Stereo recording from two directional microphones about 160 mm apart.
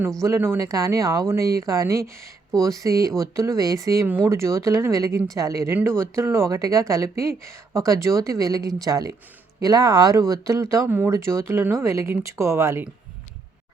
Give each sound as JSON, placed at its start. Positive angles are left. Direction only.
{"t": 0.2, "sound": "speech", "side_deg": -15}